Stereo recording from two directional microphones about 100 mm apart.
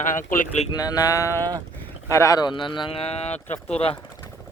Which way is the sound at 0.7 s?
40° left (ahead or behind).